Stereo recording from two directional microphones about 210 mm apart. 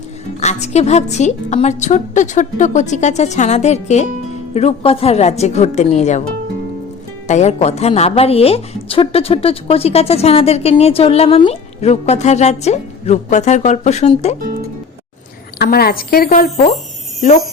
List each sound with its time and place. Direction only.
0.3 s a woman's voice: 35° left (ahead or behind)
7.3 s a woman's voice: 35° left (ahead or behind)
15.5 s speech: 50° left (ahead or behind)